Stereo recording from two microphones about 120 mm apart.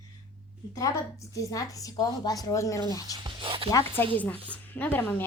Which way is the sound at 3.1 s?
40° right (ahead or behind).